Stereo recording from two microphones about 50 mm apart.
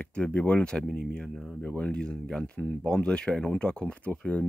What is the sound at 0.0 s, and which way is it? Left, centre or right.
Speech, left.